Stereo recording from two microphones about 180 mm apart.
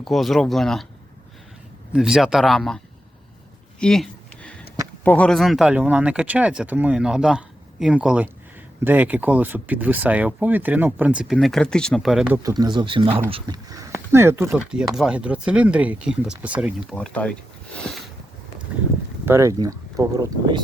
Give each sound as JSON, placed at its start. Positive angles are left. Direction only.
{"t": 0.0, "sound": "speech", "side_deg": 0}
{"t": 1.9, "sound": "speech", "side_deg": -5}
{"t": 3.8, "sound": "a sound", "side_deg": 5}
{"t": 5.0, "sound": "speech", "side_deg": 5}
{"t": 12.4, "sound": "speech", "side_deg": -20}
{"t": 16.9, "sound": "speech", "side_deg": 5}
{"t": 19.2, "sound": "speech", "side_deg": -15}